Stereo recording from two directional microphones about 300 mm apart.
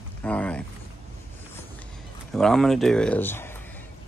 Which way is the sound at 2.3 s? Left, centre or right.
Centre.